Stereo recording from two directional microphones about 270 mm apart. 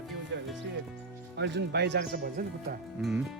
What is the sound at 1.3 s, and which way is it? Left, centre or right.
Speech, right.